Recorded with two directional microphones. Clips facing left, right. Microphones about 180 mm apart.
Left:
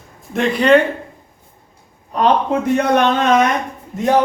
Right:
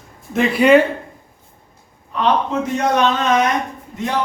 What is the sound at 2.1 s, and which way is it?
A man's voice, 50° left (ahead or behind).